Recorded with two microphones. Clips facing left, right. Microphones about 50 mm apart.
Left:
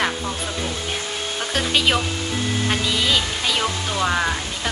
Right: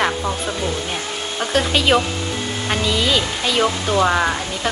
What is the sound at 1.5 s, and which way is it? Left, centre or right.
Speech, centre.